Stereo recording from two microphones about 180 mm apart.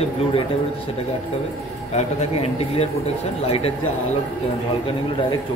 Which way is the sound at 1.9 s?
35° left (ahead or behind).